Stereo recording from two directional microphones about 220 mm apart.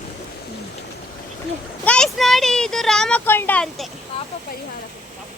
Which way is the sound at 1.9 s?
Centre (ahead or behind).